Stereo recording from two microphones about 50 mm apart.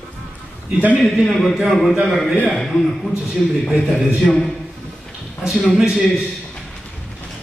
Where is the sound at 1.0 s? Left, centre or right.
Centre.